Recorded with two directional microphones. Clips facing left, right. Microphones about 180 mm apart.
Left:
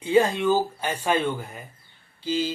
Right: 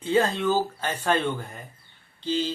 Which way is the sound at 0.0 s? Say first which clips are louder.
Left 3 dB; 15° left (ahead or behind).